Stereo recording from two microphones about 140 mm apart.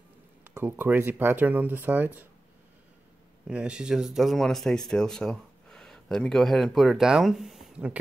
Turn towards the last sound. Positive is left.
turn(degrees=-5)  # may be behind; listen again after turning